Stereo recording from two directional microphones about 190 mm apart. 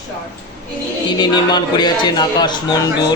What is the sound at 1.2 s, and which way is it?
A man's voice, 25° left (ahead or behind).